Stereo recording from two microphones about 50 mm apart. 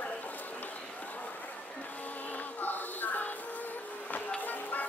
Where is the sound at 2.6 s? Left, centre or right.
Left.